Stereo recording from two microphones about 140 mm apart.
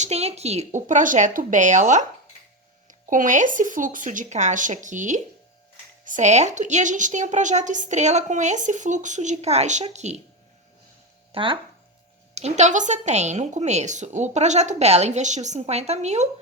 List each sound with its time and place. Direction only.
0.0 s a woman's voice: 50° right (ahead or behind)
11.3 s speech: 40° right (ahead or behind)
12.3 s a woman's voice: 50° right (ahead or behind)